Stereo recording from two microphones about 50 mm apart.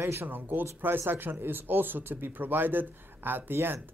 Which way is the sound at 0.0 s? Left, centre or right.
Right.